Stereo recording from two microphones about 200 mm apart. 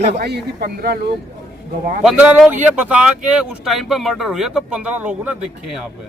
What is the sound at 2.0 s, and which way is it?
Speech, 5° right (ahead or behind).